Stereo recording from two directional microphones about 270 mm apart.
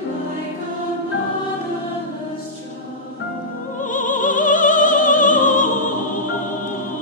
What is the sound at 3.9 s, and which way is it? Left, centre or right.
Opera, left.